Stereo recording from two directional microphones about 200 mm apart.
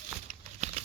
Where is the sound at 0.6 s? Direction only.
35° right (ahead or behind).